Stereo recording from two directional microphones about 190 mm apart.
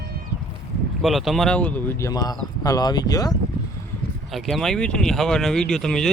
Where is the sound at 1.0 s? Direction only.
Centre (ahead or behind); by 3.4 s 20° left (ahead or behind).